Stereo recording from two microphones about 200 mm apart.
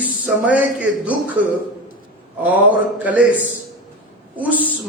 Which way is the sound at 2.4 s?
10° right (ahead or behind).